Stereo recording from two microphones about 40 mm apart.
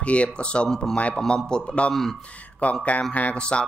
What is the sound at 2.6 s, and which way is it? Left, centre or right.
Speech, left.